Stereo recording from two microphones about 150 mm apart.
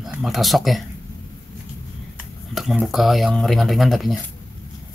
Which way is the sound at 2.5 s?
Centre (ahead or behind).